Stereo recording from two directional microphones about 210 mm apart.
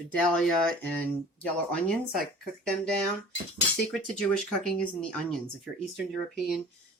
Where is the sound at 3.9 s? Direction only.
5° left (ahead or behind).